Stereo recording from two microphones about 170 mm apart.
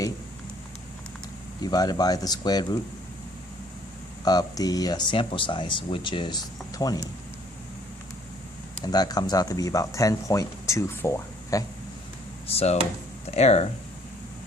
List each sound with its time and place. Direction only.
1.6 s speech: 20° left (ahead or behind)
4.2 s speech: 20° left (ahead or behind)
8.8 s speech: 25° left (ahead or behind)
12.5 s speech: 35° left (ahead or behind)